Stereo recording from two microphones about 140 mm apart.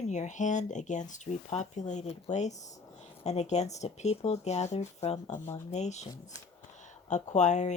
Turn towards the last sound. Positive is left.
turn(degrees=55)  # may be behind; listen again after turning